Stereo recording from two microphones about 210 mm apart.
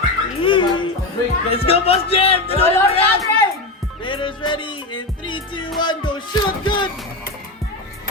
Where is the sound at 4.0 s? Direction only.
25° left (ahead or behind).